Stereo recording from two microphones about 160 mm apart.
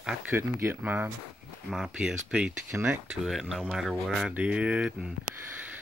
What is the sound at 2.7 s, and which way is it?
Speech, 15° right (ahead or behind).